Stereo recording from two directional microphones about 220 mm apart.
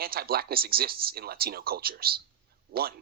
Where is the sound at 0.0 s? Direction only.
45° right (ahead or behind).